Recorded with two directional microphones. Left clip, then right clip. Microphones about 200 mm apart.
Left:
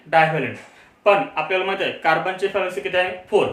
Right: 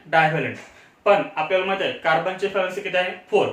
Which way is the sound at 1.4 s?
30° left (ahead or behind).